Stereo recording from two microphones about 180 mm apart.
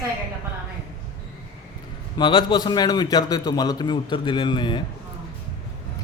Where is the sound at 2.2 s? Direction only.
25° left (ahead or behind).